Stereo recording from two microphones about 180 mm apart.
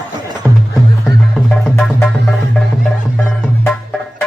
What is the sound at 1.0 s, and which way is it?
Music, 5° left (ahead or behind).